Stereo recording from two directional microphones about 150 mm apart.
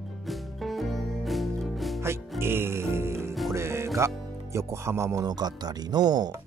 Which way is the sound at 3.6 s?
20° right (ahead or behind).